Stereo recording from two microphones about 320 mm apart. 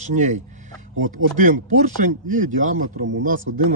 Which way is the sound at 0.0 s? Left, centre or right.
Right.